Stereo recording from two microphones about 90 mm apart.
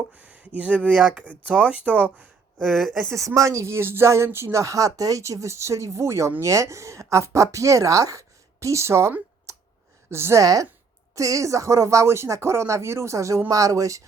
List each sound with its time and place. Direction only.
0.2 s speech: 15° right (ahead or behind)
2.6 s speech: 5° left (ahead or behind)
3.1 s speech: 35° right (ahead or behind)
9.5 s a sound: 35° right (ahead or behind)
10.1 s a woman's voice: 30° right (ahead or behind)
10.4 s speech: 40° right (ahead or behind)